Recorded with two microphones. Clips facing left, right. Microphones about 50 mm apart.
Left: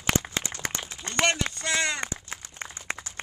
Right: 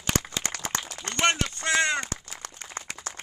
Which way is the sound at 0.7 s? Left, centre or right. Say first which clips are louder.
Right 4 dB; right.